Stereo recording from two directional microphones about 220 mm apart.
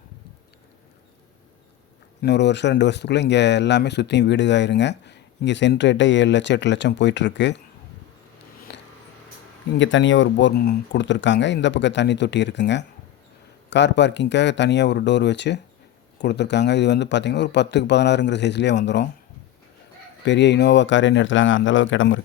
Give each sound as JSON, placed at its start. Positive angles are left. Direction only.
{"t": 2.2, "sound": "speech", "side_deg": 50}
{"t": 8.7, "sound": "a sound", "side_deg": 50}
{"t": 9.7, "sound": "speech", "side_deg": 55}
{"t": 20.2, "sound": "speech", "side_deg": 55}